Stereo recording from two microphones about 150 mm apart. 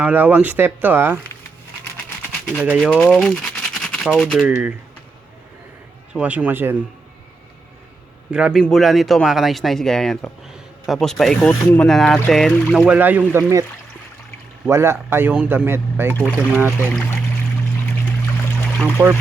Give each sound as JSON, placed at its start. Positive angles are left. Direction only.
{"t": 0.0, "sound": "speech", "side_deg": -10}
{"t": 2.6, "sound": "speech", "side_deg": -5}
{"t": 2.8, "sound": "speech", "side_deg": 5}
{"t": 6.1, "sound": "speech", "side_deg": -10}
{"t": 8.3, "sound": "speech", "side_deg": -5}
{"t": 14.7, "sound": "speech", "side_deg": -15}
{"t": 16.8, "sound": "speech", "side_deg": 10}
{"t": 19.0, "sound": "speech", "side_deg": -20}